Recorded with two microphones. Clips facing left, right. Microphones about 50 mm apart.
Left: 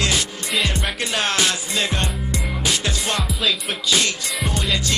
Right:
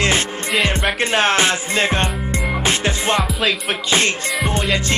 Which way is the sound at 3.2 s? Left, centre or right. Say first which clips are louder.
Right 3 dB; centre.